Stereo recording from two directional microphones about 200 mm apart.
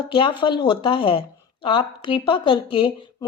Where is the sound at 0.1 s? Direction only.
25° left (ahead or behind).